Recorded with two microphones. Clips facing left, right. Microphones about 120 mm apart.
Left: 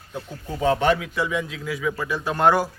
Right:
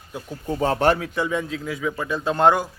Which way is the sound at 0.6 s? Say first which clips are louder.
Even; 45° right (ahead or behind).